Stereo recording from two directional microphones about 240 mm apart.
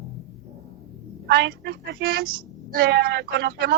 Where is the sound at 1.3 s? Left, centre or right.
Right.